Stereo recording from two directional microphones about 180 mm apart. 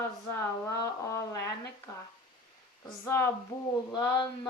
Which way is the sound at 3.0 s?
15° left (ahead or behind).